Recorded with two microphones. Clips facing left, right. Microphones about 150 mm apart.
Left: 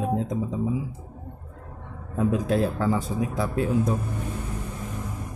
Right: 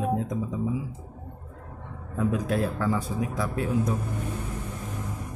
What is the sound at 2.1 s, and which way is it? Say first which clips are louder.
A man's voice: left 3 dB; 25° left (ahead or behind).